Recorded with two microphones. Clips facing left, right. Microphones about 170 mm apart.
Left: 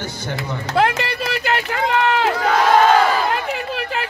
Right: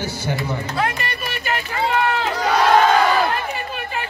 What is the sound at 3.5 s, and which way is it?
Chatter, 85° left.